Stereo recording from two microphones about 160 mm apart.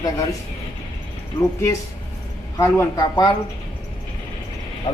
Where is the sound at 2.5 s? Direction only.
20° left (ahead or behind).